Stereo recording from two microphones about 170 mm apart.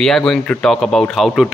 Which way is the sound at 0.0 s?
5° left (ahead or behind).